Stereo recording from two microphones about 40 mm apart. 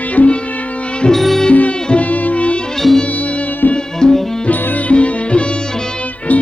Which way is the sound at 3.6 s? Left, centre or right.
Left.